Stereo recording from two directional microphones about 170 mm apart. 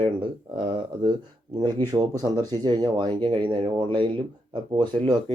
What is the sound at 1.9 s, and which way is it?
Speech, 20° right (ahead or behind).